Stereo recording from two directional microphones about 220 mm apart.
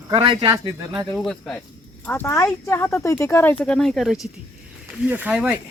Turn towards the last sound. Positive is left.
turn(degrees=-5)  # may be behind; listen again after turning